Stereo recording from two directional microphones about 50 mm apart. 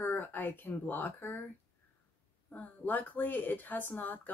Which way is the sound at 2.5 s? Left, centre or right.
Left.